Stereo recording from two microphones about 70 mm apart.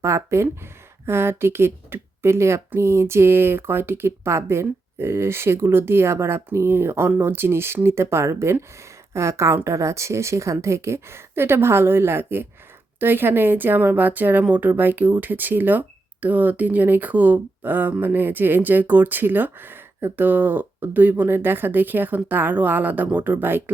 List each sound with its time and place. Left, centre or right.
0.0 s a woman's voice: right